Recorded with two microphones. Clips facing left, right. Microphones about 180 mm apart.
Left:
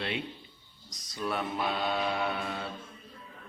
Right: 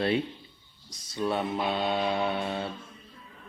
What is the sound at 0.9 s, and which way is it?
Mantra, 25° right (ahead or behind).